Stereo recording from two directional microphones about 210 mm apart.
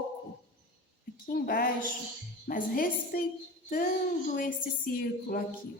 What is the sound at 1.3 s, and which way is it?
A woman's voice, 45° left (ahead or behind).